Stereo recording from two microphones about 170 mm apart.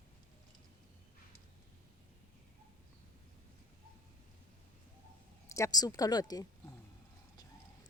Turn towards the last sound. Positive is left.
turn(degrees=25)  # may be behind; listen again after turning